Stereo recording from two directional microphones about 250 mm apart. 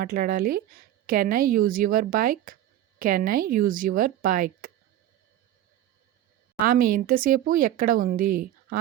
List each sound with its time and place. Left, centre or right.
0.0 s speech: right
6.6 s speech: right